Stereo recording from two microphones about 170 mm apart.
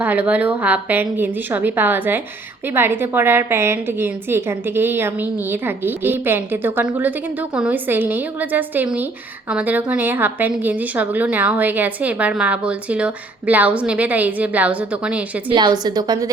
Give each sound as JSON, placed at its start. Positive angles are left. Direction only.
{"t": 0.0, "sound": "a woman's voice", "side_deg": -10}
{"t": 15.4, "sound": "a woman's voice", "side_deg": -25}